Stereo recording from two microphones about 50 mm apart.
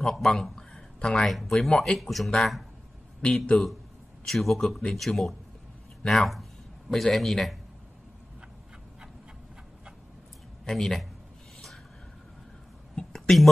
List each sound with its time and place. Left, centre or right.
0.0 s a sound: centre
0.9 s speech: centre
1.2 s speech: centre
3.5 s a man's voice: left
4.3 s speech: centre
10.6 s speech: centre
12.9 s a sound: centre